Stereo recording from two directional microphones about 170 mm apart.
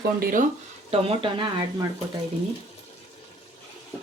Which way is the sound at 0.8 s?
35° right (ahead or behind).